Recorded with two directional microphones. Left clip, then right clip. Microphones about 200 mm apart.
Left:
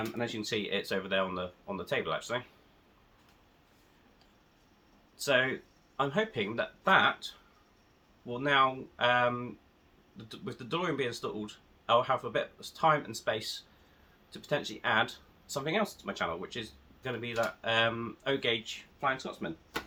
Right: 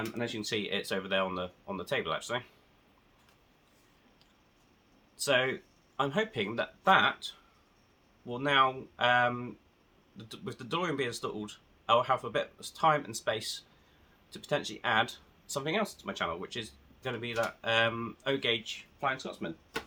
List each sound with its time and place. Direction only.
0.2 s speech: 20° right (ahead or behind)
5.1 s speech: 20° right (ahead or behind)
8.3 s speech: 20° right (ahead or behind)